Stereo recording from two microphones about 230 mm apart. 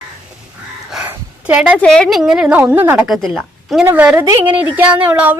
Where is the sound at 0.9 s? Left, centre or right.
Centre.